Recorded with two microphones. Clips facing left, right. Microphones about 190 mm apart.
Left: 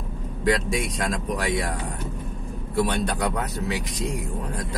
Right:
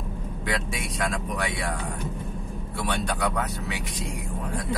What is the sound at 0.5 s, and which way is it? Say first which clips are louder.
Speech: left 8 dB; 40° left (ahead or behind).